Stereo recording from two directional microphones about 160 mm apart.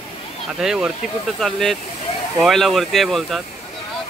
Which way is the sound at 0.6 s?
5° right (ahead or behind).